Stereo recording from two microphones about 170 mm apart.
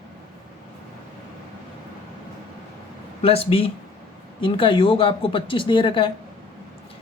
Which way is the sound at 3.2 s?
35° left (ahead or behind).